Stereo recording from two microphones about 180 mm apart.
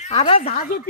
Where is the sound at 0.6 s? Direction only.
50° left (ahead or behind).